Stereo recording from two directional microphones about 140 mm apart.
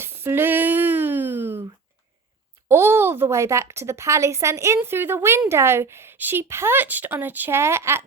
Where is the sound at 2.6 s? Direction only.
15° right (ahead or behind).